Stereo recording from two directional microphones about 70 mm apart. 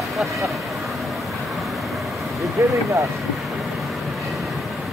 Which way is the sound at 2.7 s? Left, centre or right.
Right.